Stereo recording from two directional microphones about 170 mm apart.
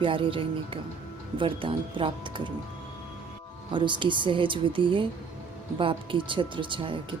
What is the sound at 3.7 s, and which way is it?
A woman's voice, 30° right (ahead or behind).